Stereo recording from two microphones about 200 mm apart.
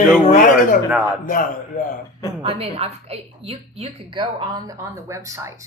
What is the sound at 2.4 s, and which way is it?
A woman's voice, 30° right (ahead or behind).